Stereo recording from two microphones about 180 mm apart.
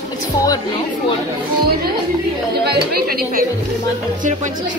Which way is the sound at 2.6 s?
60° right (ahead or behind).